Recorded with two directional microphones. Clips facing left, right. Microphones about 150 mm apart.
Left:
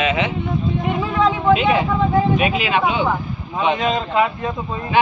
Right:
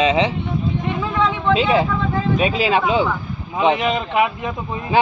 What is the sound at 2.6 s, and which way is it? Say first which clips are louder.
Speech: right 2 dB; 35° right (ahead or behind).